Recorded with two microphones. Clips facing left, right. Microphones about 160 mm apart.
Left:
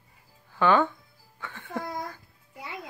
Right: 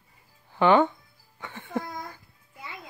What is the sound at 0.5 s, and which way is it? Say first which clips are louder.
Speech: right 3 dB; 20° right (ahead or behind).